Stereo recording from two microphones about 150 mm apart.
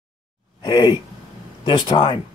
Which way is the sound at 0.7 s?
30° left (ahead or behind).